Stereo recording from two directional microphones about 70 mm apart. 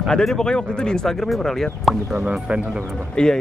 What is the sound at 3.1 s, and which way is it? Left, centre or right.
Speech, centre.